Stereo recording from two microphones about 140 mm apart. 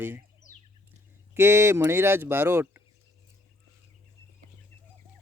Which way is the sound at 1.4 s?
20° right (ahead or behind).